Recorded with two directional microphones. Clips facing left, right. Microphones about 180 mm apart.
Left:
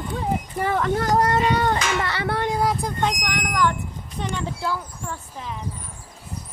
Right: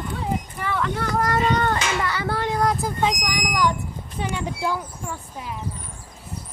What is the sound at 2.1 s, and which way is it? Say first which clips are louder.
Speech: left 1 dB; 65° left (ahead or behind).